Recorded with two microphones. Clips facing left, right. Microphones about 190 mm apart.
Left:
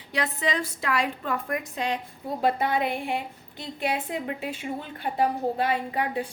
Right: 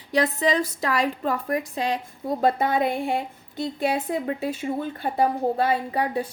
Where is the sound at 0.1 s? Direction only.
40° right (ahead or behind).